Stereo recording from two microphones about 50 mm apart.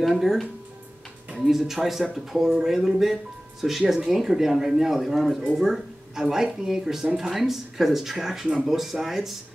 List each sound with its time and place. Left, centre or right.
0.1 s speech: centre